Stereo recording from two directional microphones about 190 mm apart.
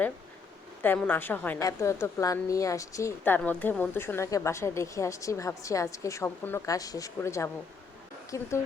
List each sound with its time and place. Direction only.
0.8 s a woman's voice: 10° left (ahead or behind)